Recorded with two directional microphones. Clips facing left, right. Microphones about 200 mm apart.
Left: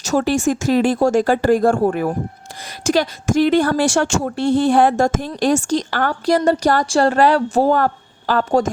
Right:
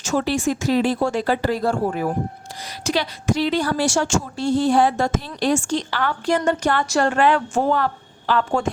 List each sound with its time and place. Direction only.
0.0 s a woman's voice: 40° left (ahead or behind)